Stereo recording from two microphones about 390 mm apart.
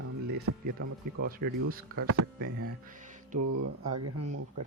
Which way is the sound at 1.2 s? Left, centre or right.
Right.